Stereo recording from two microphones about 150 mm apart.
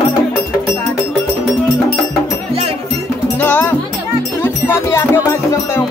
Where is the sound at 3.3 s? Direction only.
10° left (ahead or behind).